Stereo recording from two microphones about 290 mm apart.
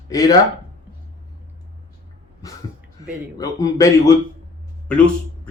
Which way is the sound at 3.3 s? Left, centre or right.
Centre.